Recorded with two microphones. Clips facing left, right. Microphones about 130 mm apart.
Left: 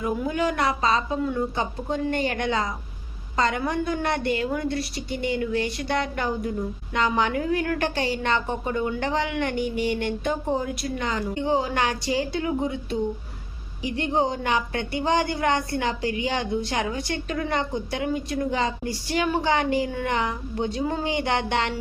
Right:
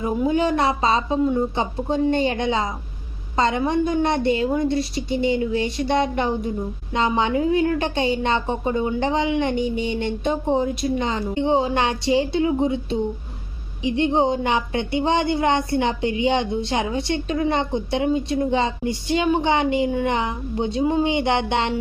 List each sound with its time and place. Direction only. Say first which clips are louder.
0.0 s a woman's voice: right 4 dB; 25° right (ahead or behind)